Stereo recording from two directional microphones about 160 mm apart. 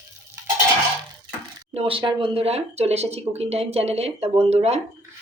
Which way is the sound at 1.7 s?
35° right (ahead or behind).